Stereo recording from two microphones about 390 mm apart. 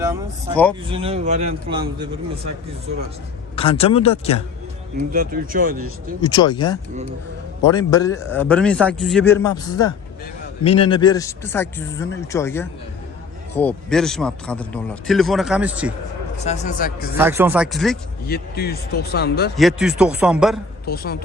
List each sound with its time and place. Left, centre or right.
0.5 s a man's voice: centre
0.9 s a man's voice: centre
3.5 s speech: centre
5.1 s speech: right
6.2 s a man's voice: centre
16.4 s speech: centre
17.2 s a man's voice: centre
18.3 s speech: left
19.5 s a man's voice: centre
20.8 s speech: left